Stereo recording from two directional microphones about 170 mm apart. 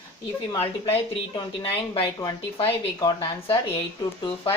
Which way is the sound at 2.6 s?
35° left (ahead or behind).